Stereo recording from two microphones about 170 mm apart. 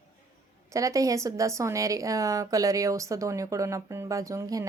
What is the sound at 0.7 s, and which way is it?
A woman's voice, 20° right (ahead or behind).